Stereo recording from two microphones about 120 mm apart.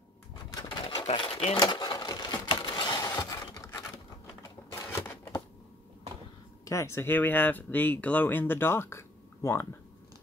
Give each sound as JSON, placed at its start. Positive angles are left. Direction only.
{"t": 0.5, "sound": "pigeon", "side_deg": 40}
{"t": 1.1, "sound": "speech", "side_deg": 45}
{"t": 1.5, "sound": "typewriter", "side_deg": 35}
{"t": 4.9, "sound": "a sound", "side_deg": 20}
{"t": 6.6, "sound": "speech", "side_deg": 25}